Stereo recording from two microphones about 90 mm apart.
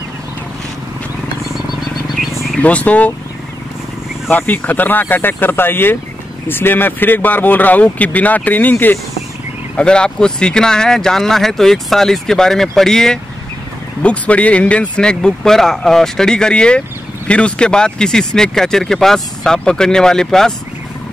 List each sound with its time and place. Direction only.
2.1 s wild animals: centre (ahead or behind)
2.6 s speech: 15° left (ahead or behind)
4.3 s speech: 20° left (ahead or behind); by 20.5 s 5° left (ahead or behind)